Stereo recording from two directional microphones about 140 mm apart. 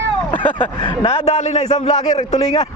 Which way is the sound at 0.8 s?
45° left (ahead or behind).